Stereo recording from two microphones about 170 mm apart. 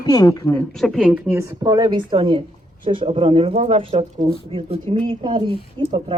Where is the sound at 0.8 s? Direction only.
Centre (ahead or behind).